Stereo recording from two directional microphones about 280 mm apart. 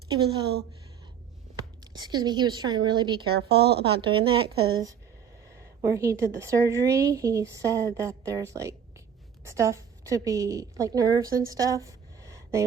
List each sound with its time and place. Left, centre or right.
2.0 s speech: centre
3.3 s a woman's voice: right
3.8 s a woman's voice: centre